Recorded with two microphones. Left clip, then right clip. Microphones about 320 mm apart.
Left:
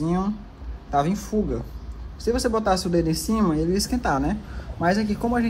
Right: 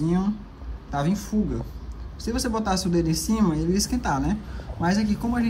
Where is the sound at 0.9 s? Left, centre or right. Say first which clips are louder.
Left 4 dB; centre.